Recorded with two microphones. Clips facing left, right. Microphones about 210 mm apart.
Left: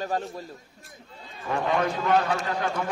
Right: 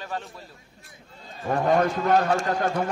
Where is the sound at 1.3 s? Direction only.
45° right (ahead or behind).